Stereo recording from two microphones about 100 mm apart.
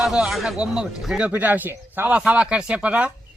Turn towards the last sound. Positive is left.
turn(degrees=-15)  # may be behind; listen again after turning